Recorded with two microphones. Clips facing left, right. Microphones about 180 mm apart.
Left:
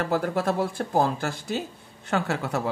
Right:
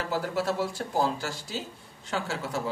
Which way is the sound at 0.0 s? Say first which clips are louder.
Left 4 dB; 55° left (ahead or behind).